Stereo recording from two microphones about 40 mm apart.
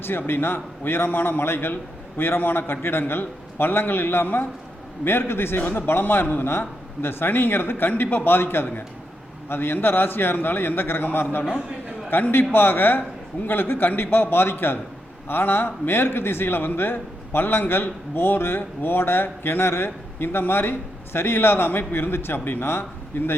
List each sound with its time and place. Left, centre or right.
0.0 s a man's voice: left
5.0 s a man's voice: left
5.7 s a man's voice: left
8.3 s a man's voice: left
23.1 s a man's voice: left